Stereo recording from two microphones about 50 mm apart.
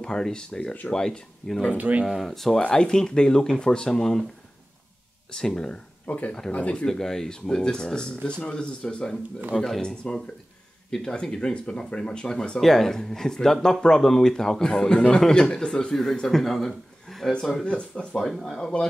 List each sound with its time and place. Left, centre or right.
0.0 s speech: centre
1.8 s speech: right
2.0 s speech: centre
2.3 s speech: centre
5.3 s speech: centre
6.0 s speech: left
6.9 s speech: centre
17.6 s speech: left
18.1 s speech: centre